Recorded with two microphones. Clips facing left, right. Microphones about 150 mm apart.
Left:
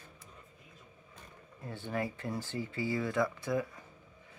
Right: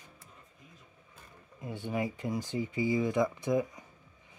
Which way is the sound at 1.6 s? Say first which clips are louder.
Right 2 dB; 15° right (ahead or behind).